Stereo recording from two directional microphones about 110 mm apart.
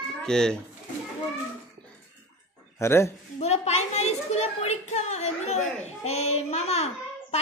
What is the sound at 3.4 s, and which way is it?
A child's voice, 75° left (ahead or behind).